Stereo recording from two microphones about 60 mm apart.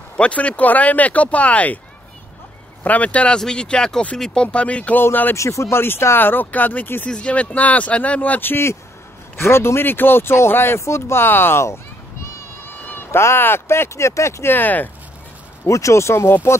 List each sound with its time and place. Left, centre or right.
0.2 s speech: left
2.8 s speech: left
4.9 s speech: left
5.3 s speech: left
7.1 s speech: centre
8.4 s speech: left
9.4 s speech: left
14.5 s speech: left
15.6 s speech: left